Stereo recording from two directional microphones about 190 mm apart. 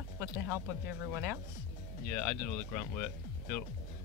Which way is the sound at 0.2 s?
15° right (ahead or behind).